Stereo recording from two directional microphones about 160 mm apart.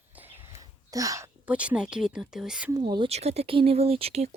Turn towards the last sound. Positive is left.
turn(degrees=-40)  # may be behind; listen again after turning